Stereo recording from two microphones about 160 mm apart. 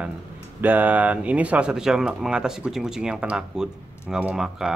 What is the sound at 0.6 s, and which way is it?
Speech, 10° right (ahead or behind).